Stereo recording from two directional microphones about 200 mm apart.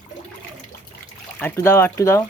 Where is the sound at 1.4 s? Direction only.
10° left (ahead or behind).